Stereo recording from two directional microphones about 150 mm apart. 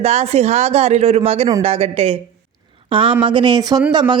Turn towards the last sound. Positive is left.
turn(degrees=-30)  # may be behind; listen again after turning